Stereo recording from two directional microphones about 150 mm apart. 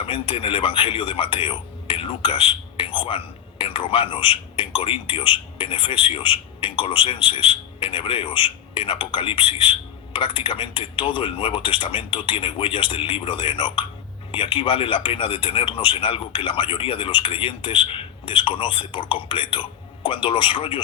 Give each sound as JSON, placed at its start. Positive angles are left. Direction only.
{"t": 0.0, "sound": "speech", "side_deg": 35}